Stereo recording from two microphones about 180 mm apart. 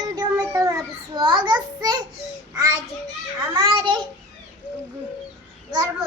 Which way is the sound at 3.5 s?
20° right (ahead or behind).